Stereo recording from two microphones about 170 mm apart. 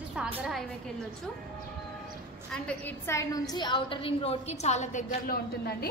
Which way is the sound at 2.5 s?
10° left (ahead or behind).